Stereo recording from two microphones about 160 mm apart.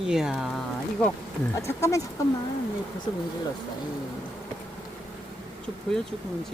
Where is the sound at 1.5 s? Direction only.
20° left (ahead or behind).